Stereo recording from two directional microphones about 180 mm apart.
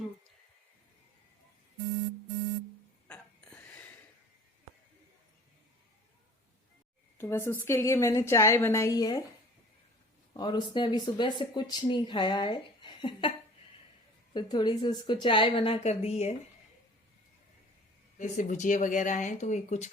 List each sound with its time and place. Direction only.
3.1 s a sound: 10° left (ahead or behind)
7.2 s a woman's voice: 15° left (ahead or behind)
10.3 s speech: 25° left (ahead or behind)
14.3 s speech: 20° left (ahead or behind)
18.2 s speech: 40° left (ahead or behind)